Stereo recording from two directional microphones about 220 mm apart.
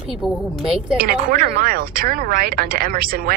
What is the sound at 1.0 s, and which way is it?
Speech, 40° right (ahead or behind).